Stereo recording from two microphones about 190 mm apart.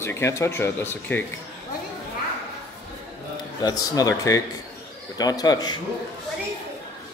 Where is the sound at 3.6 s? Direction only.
20° left (ahead or behind).